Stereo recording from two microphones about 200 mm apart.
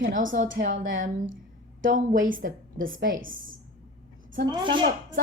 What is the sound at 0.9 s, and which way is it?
Speech, 40° right (ahead or behind).